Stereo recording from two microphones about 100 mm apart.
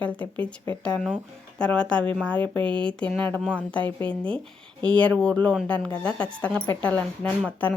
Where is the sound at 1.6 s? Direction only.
10° left (ahead or behind).